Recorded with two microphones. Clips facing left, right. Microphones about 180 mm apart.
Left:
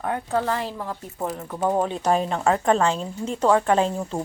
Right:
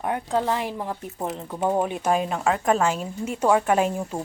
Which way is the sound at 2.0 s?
5° right (ahead or behind).